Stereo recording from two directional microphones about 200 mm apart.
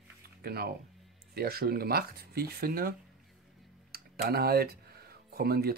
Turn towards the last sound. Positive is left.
turn(degrees=-50)  # may be behind; listen again after turning